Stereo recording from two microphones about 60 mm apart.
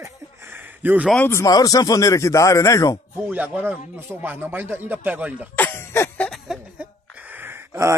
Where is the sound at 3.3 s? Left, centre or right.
Right.